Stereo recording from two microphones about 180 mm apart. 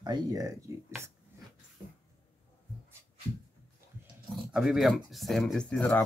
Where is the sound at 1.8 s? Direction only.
10° right (ahead or behind).